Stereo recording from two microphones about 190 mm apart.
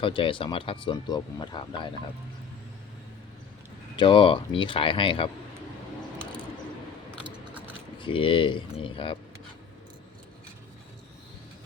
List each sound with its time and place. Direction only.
0.0 s speech: 25° left (ahead or behind)
3.9 s speech: 25° left (ahead or behind)
7.9 s speech: 25° left (ahead or behind)